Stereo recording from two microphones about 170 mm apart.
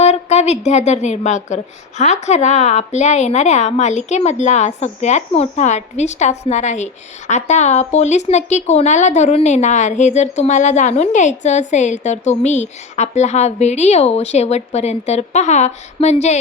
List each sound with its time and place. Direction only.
0.0 s a woman's voice: 40° left (ahead or behind)